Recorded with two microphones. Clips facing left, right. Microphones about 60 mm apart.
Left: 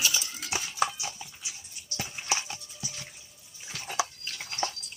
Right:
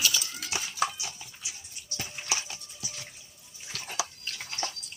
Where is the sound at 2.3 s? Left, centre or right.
Left.